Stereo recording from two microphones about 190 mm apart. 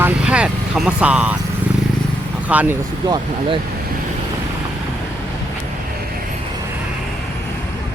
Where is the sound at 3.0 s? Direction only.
20° right (ahead or behind).